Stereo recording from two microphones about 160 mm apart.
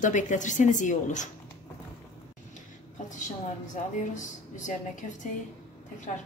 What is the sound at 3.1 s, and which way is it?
Speech, 50° left (ahead or behind).